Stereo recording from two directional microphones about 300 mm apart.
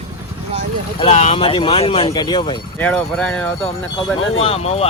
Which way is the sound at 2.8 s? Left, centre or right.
Centre.